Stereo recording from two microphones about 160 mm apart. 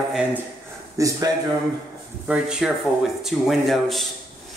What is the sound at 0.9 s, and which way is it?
Speech, 20° right (ahead or behind).